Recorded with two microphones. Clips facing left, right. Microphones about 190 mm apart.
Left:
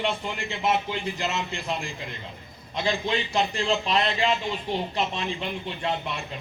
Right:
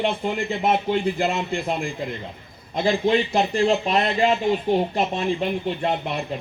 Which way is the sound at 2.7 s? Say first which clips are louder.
Right 7 dB; 45° right (ahead or behind).